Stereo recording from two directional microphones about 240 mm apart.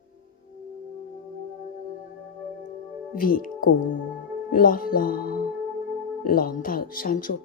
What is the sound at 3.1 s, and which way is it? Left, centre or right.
A woman's voice, left.